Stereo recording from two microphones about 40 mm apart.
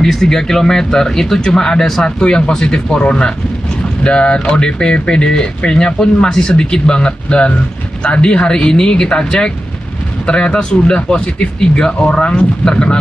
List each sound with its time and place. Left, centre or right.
0.0 s speech: centre